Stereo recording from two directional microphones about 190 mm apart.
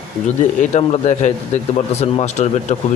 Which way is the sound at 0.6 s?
35° left (ahead or behind).